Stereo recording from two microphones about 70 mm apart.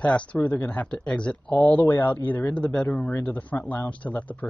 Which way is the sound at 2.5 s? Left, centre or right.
Centre.